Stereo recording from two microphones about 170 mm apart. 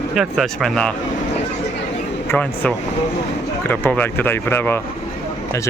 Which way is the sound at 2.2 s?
10° left (ahead or behind).